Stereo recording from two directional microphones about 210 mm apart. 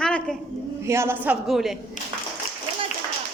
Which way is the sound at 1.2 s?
Centre (ahead or behind).